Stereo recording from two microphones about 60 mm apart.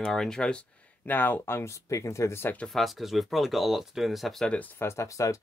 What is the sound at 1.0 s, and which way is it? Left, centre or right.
Speech, left.